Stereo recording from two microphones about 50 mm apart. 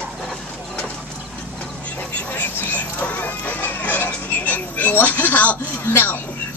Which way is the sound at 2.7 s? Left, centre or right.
Left.